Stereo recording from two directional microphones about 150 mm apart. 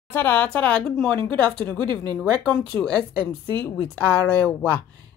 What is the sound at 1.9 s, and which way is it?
Speech, 30° right (ahead or behind).